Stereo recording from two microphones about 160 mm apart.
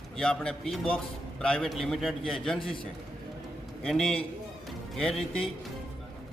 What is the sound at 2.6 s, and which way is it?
Speech, 30° left (ahead or behind).